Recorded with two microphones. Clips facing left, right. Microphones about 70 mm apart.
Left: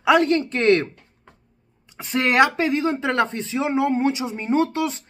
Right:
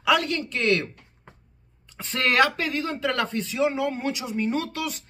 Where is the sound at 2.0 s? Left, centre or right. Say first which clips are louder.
Left 4 dB; centre.